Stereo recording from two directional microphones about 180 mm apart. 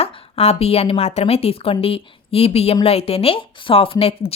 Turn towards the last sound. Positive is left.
turn(degrees=30)  # may be behind; listen again after turning